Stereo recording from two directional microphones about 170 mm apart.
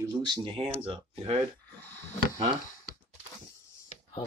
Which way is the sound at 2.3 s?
25° right (ahead or behind).